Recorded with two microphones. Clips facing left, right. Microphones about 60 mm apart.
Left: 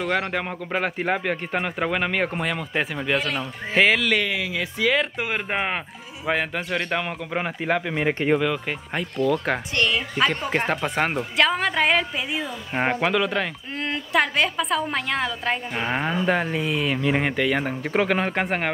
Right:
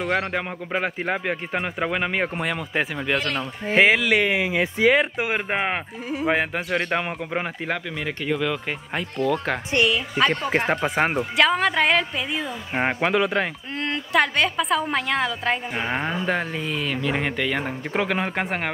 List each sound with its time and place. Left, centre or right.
0.3 s a woman's voice: centre
3.7 s speech: centre
4.2 s speech: right
7.3 s a woman's voice: centre
7.9 s speech: left
8.6 s a woman's voice: centre
10.5 s a woman's voice: centre
13.7 s a woman's voice: centre